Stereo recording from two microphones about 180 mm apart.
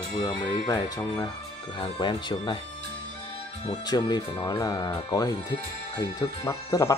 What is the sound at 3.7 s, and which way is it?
Speech, 25° left (ahead or behind).